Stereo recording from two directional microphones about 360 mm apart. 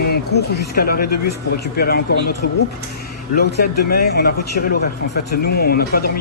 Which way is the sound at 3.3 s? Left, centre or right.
Left.